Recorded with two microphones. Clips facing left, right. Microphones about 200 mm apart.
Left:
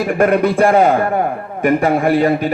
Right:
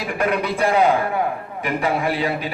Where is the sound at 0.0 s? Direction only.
50° left (ahead or behind).